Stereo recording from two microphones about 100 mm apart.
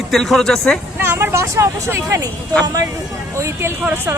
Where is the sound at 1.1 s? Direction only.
25° right (ahead or behind).